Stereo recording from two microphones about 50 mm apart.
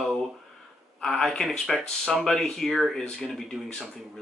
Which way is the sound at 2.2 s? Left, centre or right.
Centre.